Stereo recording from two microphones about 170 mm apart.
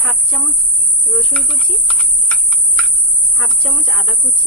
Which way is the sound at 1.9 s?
5° left (ahead or behind).